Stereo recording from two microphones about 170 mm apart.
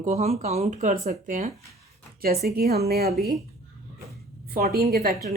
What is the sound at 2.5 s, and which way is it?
Speech, 65° right (ahead or behind).